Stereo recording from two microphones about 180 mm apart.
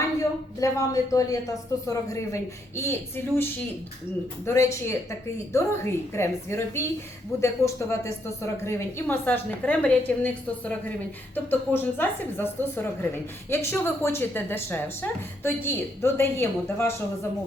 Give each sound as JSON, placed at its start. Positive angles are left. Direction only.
{"t": 0.6, "sound": "a woman's voice", "side_deg": 20}